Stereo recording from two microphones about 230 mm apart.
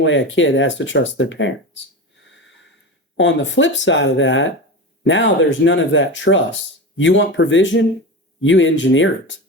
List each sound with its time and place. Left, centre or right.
0.0 s speech: left
3.2 s speech: left